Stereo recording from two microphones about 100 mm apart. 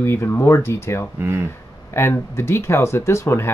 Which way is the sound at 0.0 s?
25° left (ahead or behind).